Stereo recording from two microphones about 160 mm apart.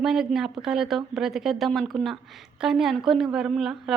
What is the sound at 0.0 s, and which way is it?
A woman's voice, centre (ahead or behind).